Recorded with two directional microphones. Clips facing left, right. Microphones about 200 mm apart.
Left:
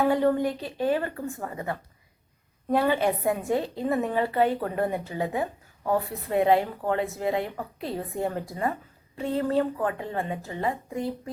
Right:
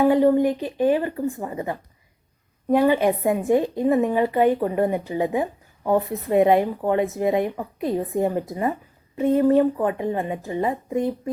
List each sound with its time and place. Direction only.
0.0 s a woman's voice: 15° right (ahead or behind)